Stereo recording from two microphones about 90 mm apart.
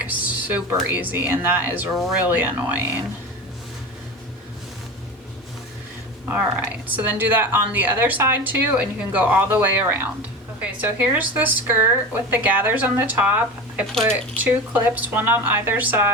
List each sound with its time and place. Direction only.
0.0 s a sound: 15° right (ahead or behind)
0.9 s speech: 20° right (ahead or behind)
6.2 s speech: 20° right (ahead or behind)
14.4 s speech: 20° right (ahead or behind)